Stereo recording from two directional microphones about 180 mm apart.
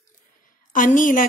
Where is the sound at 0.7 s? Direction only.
45° left (ahead or behind).